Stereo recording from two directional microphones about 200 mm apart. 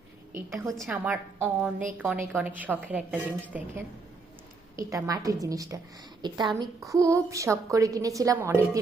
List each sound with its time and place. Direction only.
0.3 s a woman's voice: 15° right (ahead or behind)
4.8 s a woman's voice: 15° right (ahead or behind)